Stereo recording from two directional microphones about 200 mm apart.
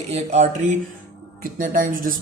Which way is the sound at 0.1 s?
35° right (ahead or behind).